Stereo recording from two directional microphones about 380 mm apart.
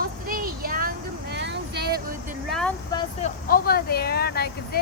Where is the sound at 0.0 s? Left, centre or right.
Right.